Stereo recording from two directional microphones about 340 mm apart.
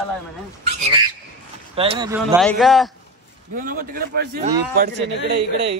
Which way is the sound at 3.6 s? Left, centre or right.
Right.